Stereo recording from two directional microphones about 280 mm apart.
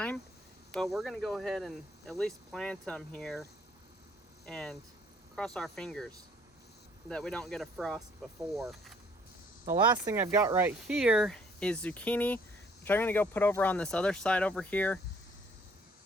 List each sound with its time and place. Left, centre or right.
0.7 s speech: centre
4.4 s speech: centre
9.6 s speech: centre